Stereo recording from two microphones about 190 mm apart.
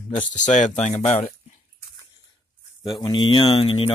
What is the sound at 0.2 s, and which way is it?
Speech, 40° left (ahead or behind).